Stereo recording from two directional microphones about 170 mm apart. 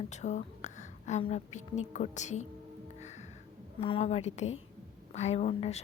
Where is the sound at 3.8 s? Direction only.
35° left (ahead or behind).